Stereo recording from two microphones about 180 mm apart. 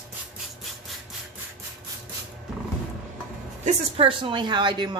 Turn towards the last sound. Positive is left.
turn(degrees=-25)  # may be behind; listen again after turning